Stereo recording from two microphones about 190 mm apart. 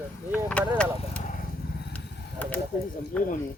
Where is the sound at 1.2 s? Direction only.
45° left (ahead or behind).